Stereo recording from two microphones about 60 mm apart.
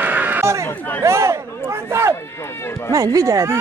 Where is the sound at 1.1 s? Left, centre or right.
Right.